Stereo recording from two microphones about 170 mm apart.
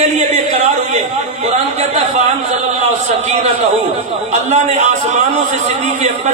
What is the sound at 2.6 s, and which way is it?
A man's voice, 40° right (ahead or behind).